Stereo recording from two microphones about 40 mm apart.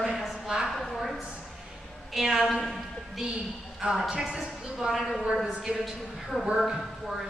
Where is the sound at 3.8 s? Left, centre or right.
Centre.